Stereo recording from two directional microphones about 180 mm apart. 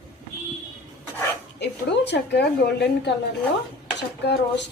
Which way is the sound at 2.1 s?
70° left (ahead or behind).